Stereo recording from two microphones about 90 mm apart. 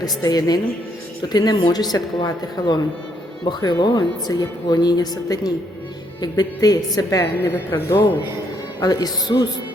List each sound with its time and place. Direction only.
0.2 s a woman's voice: 45° left (ahead or behind)
7.5 s speech: 25° left (ahead or behind)
8.8 s speech: 45° left (ahead or behind)